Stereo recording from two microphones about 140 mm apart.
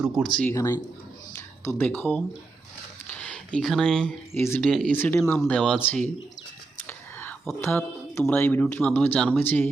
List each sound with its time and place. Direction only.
0.4 s speech: 20° left (ahead or behind)
1.3 s a sound: 20° left (ahead or behind)
4.4 s speech: 15° left (ahead or behind)
4.7 s speech: 5° left (ahead or behind)
4.9 s speech: 15° left (ahead or behind)
6.8 s whispering: 15° left (ahead or behind)
7.6 s speech: 15° left (ahead or behind)